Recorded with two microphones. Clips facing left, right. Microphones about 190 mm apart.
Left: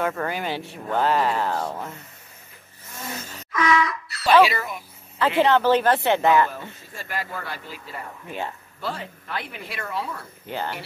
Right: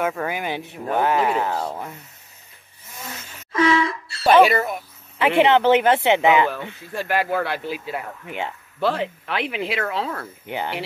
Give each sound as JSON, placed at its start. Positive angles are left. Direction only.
{"t": 0.0, "sound": "speech", "side_deg": 0}
{"t": 0.3, "sound": "speech", "side_deg": -15}
{"t": 3.5, "sound": "wind instrument", "side_deg": -30}
{"t": 4.3, "sound": "speech", "side_deg": -50}
{"t": 5.2, "sound": "speech", "side_deg": -20}
{"t": 6.2, "sound": "speech", "side_deg": -80}
{"t": 10.4, "sound": "speech", "side_deg": -15}